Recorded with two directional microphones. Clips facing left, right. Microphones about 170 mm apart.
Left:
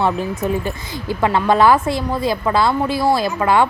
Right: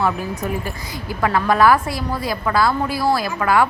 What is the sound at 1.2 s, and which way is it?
Speech, 25° left (ahead or behind).